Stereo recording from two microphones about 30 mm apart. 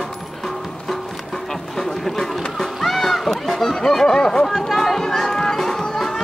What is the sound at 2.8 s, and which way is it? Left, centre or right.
Music, centre.